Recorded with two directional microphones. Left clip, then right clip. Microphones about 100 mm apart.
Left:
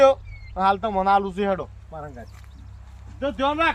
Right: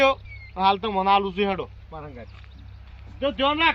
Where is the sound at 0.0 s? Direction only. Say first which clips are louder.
Left 4 dB; 50° left (ahead or behind).